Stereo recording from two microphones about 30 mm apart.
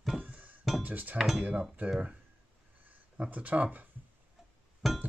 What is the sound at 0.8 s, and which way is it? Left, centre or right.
Speech, right.